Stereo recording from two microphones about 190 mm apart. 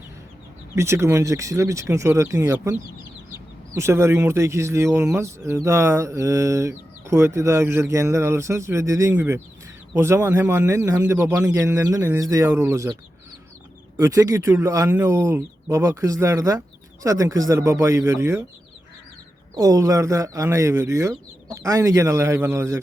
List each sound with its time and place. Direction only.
0.8 s speech: 15° right (ahead or behind)
3.8 s speech: 15° right (ahead or behind)
19.5 s speech: 20° right (ahead or behind)